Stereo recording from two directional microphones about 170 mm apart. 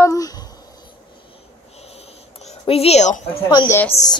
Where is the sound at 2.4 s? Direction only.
40° left (ahead or behind).